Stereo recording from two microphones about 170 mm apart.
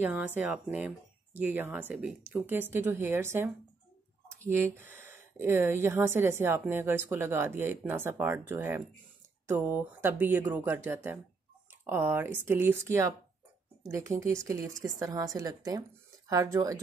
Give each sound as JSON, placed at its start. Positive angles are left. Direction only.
{"t": 0.0, "sound": "a woman's voice", "side_deg": -10}